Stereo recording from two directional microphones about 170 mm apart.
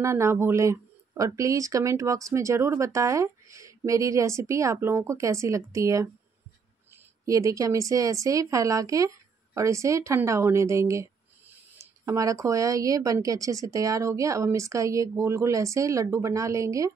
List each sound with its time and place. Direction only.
0.0 s speech: 15° right (ahead or behind)
7.2 s speech: 20° right (ahead or behind)